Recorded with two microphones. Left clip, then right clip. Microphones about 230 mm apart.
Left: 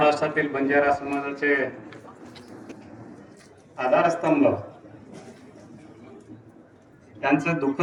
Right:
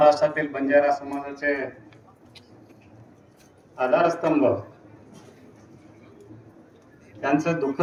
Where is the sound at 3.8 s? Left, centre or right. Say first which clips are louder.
Even; left.